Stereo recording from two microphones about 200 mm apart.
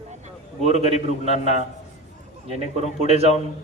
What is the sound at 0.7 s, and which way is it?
Speech, 35° left (ahead or behind).